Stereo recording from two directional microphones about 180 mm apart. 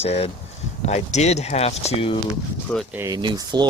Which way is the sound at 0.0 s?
35° left (ahead or behind).